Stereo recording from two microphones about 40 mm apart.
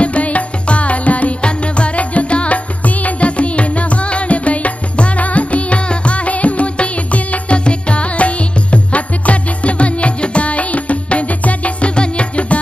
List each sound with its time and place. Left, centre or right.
0.0 s music: left